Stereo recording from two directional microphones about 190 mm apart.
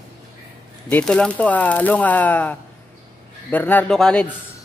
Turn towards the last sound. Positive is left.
turn(degrees=5)  # may be behind; listen again after turning